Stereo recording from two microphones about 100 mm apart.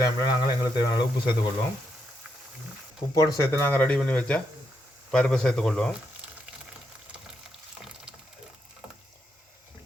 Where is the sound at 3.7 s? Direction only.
15° left (ahead or behind).